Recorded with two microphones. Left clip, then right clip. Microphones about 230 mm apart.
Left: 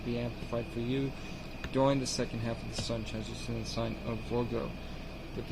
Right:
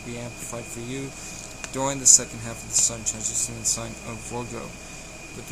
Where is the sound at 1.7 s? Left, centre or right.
Centre.